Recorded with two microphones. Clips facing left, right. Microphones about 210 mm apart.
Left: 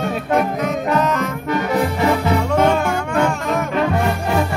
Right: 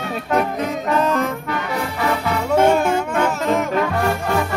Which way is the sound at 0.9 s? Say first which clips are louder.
Right 2 dB; 30° right (ahead or behind).